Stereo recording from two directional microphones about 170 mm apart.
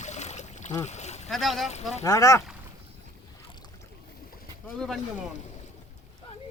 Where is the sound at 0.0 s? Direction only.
40° left (ahead or behind).